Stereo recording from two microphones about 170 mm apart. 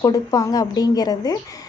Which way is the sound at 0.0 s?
20° left (ahead or behind).